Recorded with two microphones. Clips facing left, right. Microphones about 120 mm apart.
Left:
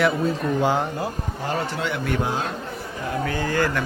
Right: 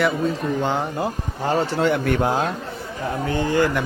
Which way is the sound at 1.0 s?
30° right (ahead or behind).